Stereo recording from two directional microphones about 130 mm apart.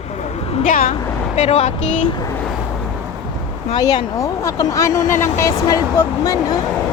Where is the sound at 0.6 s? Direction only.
90° left.